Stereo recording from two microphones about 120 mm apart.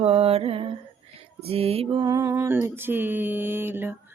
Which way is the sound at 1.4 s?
55° right (ahead or behind).